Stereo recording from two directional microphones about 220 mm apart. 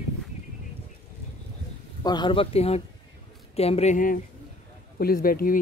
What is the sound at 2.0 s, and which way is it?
Speech, 20° left (ahead or behind).